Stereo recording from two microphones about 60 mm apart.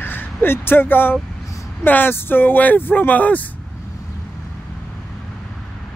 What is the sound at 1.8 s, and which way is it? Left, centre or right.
Speech, left.